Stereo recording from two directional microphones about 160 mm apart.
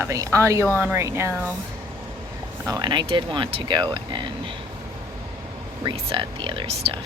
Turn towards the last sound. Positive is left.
turn(degrees=-40)  # may be behind; listen again after turning